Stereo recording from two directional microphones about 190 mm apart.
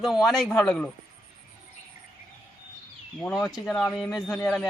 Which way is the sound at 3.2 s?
Centre (ahead or behind).